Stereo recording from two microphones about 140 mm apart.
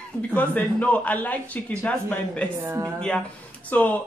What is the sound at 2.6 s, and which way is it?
Speech, 20° right (ahead or behind).